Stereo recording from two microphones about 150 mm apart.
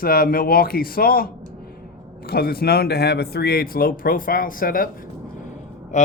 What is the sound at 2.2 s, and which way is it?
Speech, 90° left.